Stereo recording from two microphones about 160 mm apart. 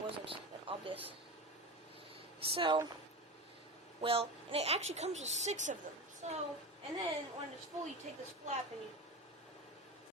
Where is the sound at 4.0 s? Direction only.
35° right (ahead or behind).